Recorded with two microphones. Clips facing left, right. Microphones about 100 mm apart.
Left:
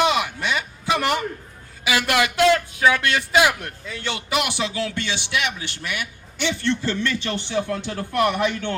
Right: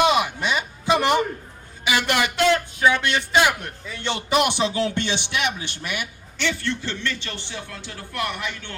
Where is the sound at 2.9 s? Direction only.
25° right (ahead or behind).